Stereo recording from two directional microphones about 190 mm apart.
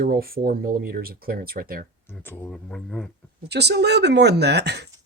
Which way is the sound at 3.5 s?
60° right (ahead or behind).